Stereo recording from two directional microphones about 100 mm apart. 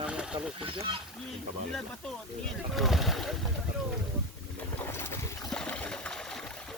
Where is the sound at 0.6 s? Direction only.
60° right (ahead or behind).